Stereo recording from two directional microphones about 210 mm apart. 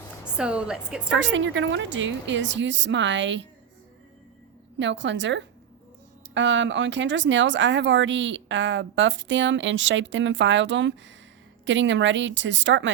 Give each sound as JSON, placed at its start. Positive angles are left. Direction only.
{"t": 0.3, "sound": "a woman's voice", "side_deg": -5}
{"t": 1.2, "sound": "speech", "side_deg": -60}
{"t": 4.8, "sound": "speech", "side_deg": -60}